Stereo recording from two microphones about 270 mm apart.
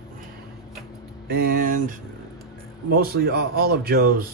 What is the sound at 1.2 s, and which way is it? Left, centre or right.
Speech, right.